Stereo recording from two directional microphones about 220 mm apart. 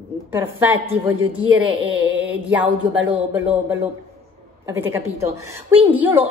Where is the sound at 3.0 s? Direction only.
10° right (ahead or behind).